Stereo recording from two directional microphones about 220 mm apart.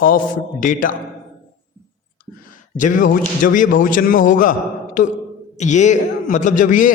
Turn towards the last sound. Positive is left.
turn(degrees=35)  # may be behind; listen again after turning